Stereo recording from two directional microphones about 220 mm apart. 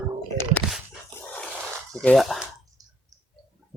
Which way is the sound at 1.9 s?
Centre (ahead or behind).